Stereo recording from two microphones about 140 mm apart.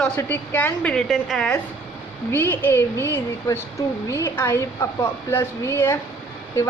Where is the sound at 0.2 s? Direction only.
15° left (ahead or behind).